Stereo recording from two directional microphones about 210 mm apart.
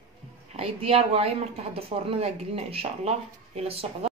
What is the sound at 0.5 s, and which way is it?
Speech, 30° right (ahead or behind).